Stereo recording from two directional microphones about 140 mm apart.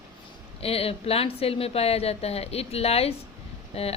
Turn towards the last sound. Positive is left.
turn(degrees=45)  # may be behind; listen again after turning